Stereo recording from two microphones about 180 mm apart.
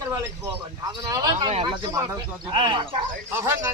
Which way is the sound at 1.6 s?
25° right (ahead or behind).